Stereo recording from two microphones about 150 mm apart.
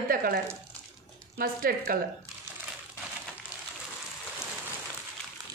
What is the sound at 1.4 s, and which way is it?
Speech, 80° right.